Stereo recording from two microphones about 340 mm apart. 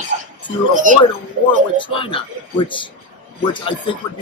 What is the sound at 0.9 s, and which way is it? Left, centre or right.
Speech, right.